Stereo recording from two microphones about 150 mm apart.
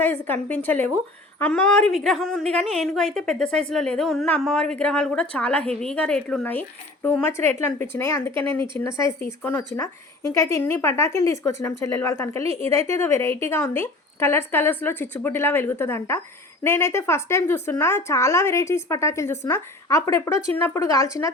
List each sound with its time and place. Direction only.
0.0 s a woman's voice: 15° left (ahead or behind)